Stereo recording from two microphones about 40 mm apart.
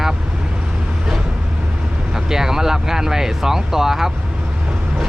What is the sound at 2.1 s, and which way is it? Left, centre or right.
Speech, centre.